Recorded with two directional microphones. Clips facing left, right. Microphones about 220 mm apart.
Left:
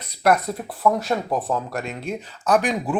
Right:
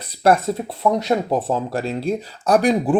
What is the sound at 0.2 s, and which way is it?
Speech, 30° right (ahead or behind).